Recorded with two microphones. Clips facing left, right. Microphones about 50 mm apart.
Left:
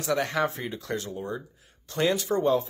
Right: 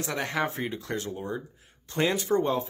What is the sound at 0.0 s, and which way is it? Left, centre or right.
Speech, right.